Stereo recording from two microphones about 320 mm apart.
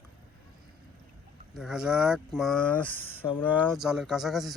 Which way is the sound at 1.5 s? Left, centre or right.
Centre.